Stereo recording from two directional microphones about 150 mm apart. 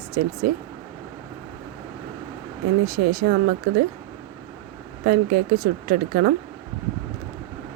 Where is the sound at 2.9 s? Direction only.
90° right.